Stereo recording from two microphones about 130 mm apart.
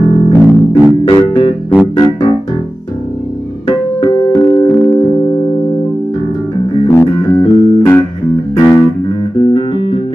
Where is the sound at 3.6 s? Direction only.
35° left (ahead or behind).